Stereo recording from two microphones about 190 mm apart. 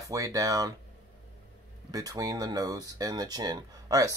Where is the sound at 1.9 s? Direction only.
20° right (ahead or behind).